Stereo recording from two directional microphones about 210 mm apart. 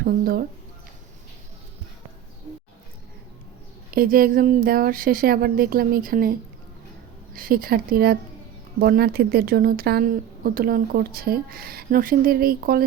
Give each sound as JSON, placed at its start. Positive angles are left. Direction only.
{"t": 0.0, "sound": "speech", "side_deg": -45}
{"t": 3.9, "sound": "speech", "side_deg": -45}
{"t": 7.3, "sound": "speech", "side_deg": -45}